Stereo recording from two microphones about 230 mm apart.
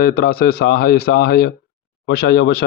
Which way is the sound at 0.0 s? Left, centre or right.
Left.